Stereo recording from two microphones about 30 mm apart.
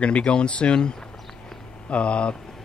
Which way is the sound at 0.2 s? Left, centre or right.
Left.